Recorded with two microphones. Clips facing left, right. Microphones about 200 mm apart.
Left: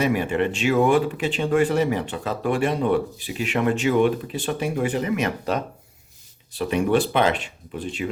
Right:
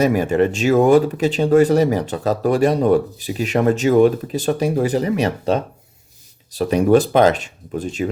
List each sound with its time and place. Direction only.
0.0 s speech: 40° right (ahead or behind)